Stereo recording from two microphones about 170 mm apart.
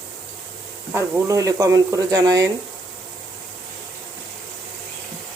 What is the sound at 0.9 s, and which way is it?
Speech, 15° right (ahead or behind).